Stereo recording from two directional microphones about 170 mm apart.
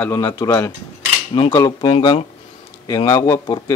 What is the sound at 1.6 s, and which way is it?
Speech, 30° left (ahead or behind).